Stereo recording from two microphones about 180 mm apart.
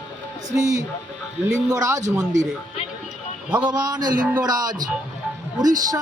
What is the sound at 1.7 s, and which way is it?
Speech, 15° right (ahead or behind).